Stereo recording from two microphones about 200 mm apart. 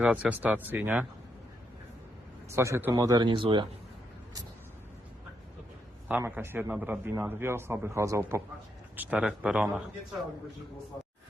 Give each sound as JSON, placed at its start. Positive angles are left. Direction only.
{"t": 0.0, "sound": "a man's voice", "side_deg": -5}
{"t": 2.5, "sound": "speech", "side_deg": -15}
{"t": 6.1, "sound": "a man's voice", "side_deg": -10}